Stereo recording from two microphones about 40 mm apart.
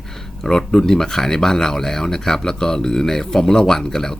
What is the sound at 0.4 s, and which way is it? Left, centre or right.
Speech, centre.